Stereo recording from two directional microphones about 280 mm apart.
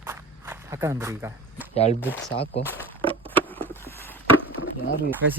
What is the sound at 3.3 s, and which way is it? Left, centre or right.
Patter, centre.